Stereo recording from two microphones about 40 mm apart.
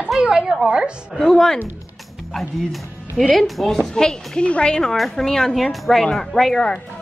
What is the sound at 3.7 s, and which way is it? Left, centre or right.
Speech, centre.